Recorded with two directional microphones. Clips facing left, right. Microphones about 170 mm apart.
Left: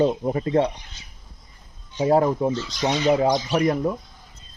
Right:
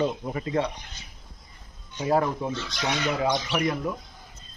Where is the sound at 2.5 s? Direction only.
65° right (ahead or behind).